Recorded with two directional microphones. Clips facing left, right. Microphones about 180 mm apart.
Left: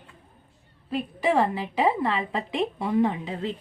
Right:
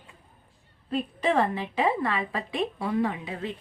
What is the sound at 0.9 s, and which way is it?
A woman's voice, 10° left (ahead or behind).